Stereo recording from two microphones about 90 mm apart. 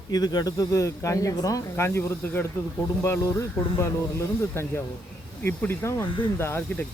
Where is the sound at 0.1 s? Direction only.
45° left (ahead or behind).